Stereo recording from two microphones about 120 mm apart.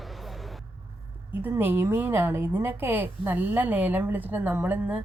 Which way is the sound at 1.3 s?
15° right (ahead or behind).